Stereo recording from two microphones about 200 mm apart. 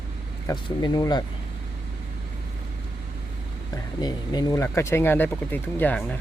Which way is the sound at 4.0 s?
20° left (ahead or behind).